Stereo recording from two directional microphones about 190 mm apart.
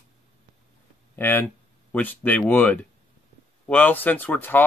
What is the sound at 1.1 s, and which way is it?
Speech, 10° left (ahead or behind).